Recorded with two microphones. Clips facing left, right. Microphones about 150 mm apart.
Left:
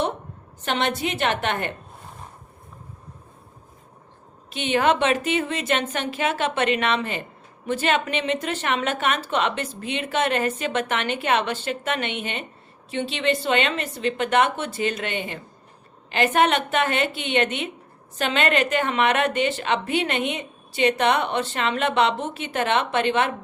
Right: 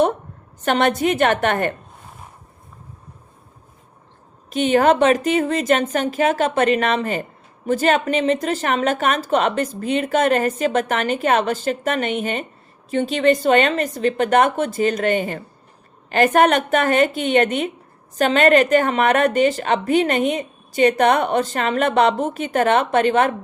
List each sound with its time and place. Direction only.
0.6 s a woman's voice: 50° right (ahead or behind)
4.4 s a woman's voice: 40° right (ahead or behind)